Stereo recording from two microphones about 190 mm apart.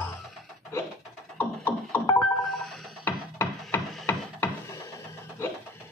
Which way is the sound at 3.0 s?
10° left (ahead or behind).